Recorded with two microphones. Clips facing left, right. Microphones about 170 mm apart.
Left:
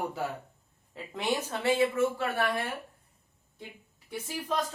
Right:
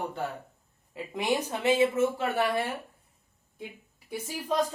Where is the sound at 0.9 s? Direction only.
15° right (ahead or behind).